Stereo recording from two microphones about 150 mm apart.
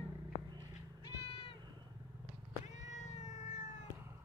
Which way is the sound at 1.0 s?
40° left (ahead or behind).